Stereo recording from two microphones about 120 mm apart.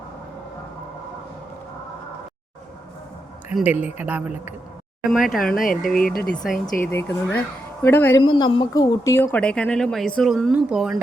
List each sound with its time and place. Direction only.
3.5 s a woman's voice: 15° right (ahead or behind)
5.1 s speech: 5° left (ahead or behind)
6.9 s a woman's voice: 15° left (ahead or behind)
8.2 s a woman's voice: 40° left (ahead or behind); by 9.4 s 20° left (ahead or behind)
9.4 s speech: 10° left (ahead or behind); by 10.9 s 5° right (ahead or behind)